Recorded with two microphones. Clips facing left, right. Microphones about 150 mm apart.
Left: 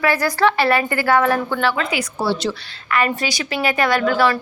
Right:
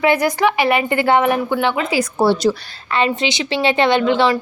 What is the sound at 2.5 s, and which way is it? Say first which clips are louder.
Speech: right 7 dB; 35° right (ahead or behind).